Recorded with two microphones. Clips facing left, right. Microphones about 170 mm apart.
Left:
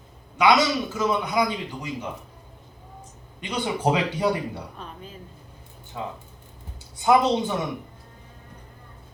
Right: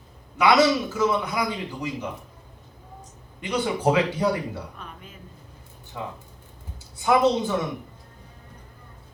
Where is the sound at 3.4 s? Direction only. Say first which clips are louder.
Right 1 dB; 20° left (ahead or behind).